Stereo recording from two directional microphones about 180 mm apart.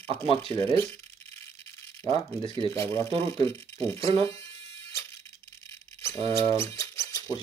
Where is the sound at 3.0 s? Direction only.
30° right (ahead or behind).